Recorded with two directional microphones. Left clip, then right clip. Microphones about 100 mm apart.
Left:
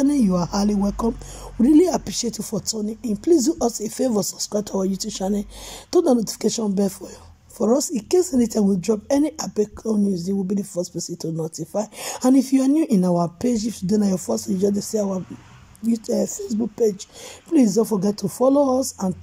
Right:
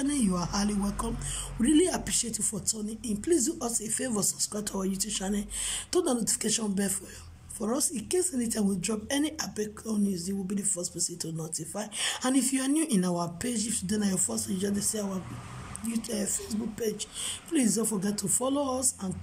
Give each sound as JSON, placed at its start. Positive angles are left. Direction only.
{"t": 0.0, "sound": "a woman's voice", "side_deg": 40}
{"t": 17.6, "sound": "speech", "side_deg": 0}
{"t": 18.4, "sound": "a woman's voice", "side_deg": 40}
{"t": 18.8, "sound": "speech", "side_deg": 0}